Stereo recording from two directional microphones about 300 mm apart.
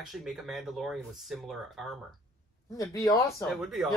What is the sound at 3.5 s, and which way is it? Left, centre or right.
Speech, centre.